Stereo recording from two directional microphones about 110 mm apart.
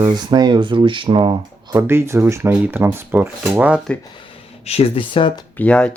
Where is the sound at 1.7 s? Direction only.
20° right (ahead or behind).